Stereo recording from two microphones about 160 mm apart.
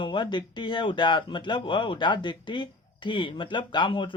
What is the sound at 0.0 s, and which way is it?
Speech, 30° left (ahead or behind).